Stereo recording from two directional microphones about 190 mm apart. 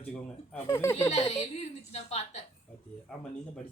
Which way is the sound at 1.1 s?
35° left (ahead or behind).